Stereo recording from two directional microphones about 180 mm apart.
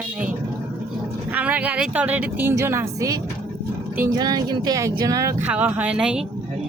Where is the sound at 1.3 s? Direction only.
10° right (ahead or behind).